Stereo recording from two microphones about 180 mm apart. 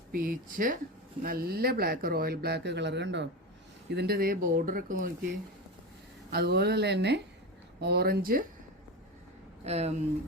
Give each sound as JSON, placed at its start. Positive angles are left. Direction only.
{"t": 0.1, "sound": "speech", "side_deg": -55}
{"t": 3.9, "sound": "speech", "side_deg": -60}
{"t": 6.3, "sound": "speech", "side_deg": -65}
{"t": 9.6, "sound": "speech", "side_deg": -35}